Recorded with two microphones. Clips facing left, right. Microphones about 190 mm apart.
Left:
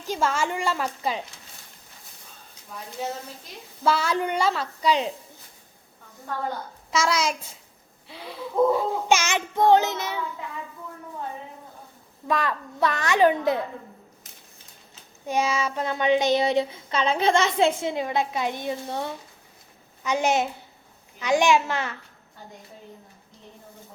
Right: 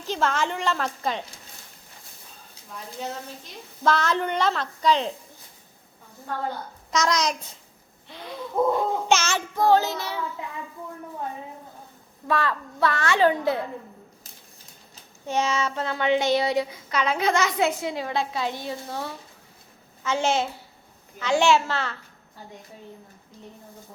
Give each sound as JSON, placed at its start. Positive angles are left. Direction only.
{"t": 0.1, "sound": "child singing", "side_deg": 10}
{"t": 3.8, "sound": "child singing", "side_deg": 10}
{"t": 6.9, "sound": "child singing", "side_deg": 5}
{"t": 12.3, "sound": "child singing", "side_deg": 20}
{"t": 15.3, "sound": "a sound", "side_deg": 10}
{"t": 20.1, "sound": "child singing", "side_deg": 15}